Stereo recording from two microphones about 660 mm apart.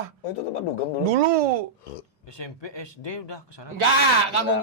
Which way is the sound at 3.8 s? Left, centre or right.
Right.